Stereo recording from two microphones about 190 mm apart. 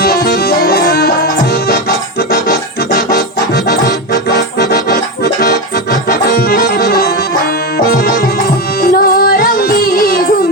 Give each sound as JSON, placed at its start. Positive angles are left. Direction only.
{"t": 0.0, "sound": "music", "side_deg": 55}
{"t": 4.5, "sound": "accordion", "side_deg": 55}